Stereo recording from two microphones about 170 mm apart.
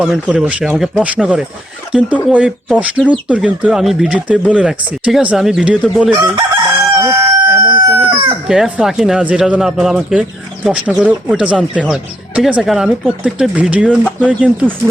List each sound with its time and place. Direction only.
0.0 s speech: 5° right (ahead or behind)
6.9 s crowing: 15° right (ahead or behind)
7.7 s chicken: 20° right (ahead or behind)
8.4 s speech: 5° right (ahead or behind)